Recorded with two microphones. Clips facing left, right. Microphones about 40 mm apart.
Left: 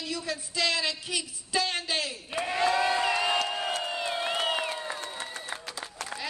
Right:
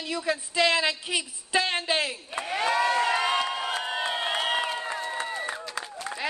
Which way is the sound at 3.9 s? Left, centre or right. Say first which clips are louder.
Right 2 dB; right.